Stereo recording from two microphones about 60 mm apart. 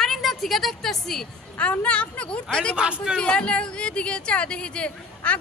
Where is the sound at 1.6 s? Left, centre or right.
Left.